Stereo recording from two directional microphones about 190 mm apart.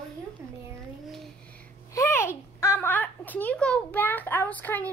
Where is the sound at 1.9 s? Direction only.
15° left (ahead or behind).